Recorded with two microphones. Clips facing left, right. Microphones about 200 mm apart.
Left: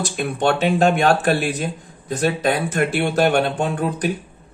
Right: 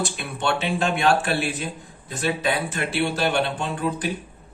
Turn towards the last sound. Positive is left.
turn(degrees=50)  # may be behind; listen again after turning